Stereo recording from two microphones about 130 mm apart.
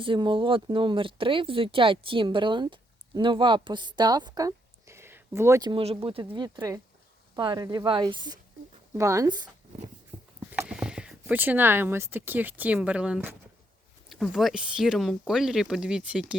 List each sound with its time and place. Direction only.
0.0 s speech: 40° right (ahead or behind); by 5.6 s 20° right (ahead or behind)
5.6 s speech: 45° right (ahead or behind)
6.3 s speech: 30° right (ahead or behind)
10.1 s a sound: 50° right (ahead or behind)
10.7 s a sound: 5° right (ahead or behind)
11.2 s speech: 15° right (ahead or behind)